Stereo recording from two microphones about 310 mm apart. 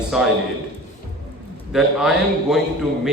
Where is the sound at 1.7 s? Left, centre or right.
Centre.